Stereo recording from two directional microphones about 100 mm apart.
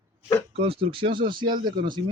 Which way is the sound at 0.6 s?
65° right (ahead or behind).